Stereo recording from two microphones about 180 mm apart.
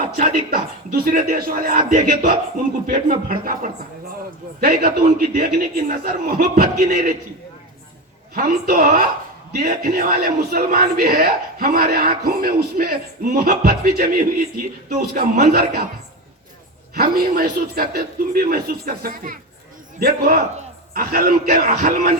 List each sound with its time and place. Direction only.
0.0 s a man's voice: 50° right (ahead or behind)
8.4 s a man's voice: 55° right (ahead or behind)
16.9 s a man's voice: 55° right (ahead or behind)